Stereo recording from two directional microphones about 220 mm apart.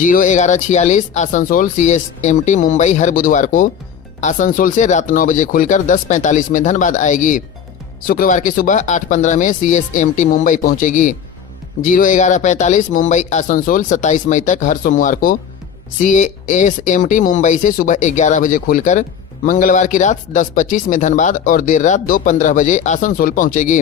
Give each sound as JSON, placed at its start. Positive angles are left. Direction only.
{"t": 0.0, "sound": "speech", "side_deg": 35}